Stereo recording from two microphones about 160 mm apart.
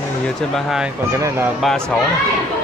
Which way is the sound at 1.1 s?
15° right (ahead or behind).